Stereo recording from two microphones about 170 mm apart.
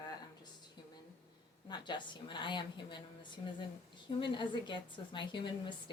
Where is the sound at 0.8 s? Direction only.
25° left (ahead or behind).